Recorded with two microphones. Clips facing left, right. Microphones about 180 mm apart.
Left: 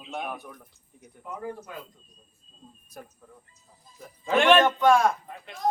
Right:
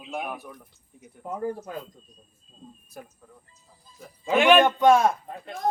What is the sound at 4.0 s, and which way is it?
Speech, 5° right (ahead or behind).